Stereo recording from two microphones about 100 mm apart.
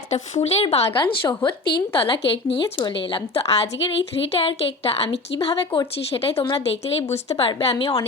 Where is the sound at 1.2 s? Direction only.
45° left (ahead or behind).